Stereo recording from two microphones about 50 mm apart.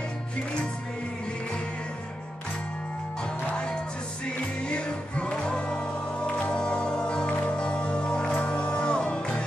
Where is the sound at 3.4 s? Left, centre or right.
Left.